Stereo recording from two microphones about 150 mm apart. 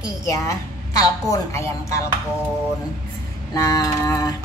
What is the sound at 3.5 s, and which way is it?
Music, 25° left (ahead or behind).